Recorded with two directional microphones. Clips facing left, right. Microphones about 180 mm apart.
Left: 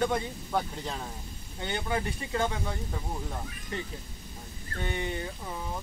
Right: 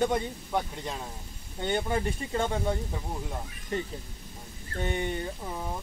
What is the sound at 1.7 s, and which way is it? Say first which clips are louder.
Speech: right 3 dB; 25° right (ahead or behind).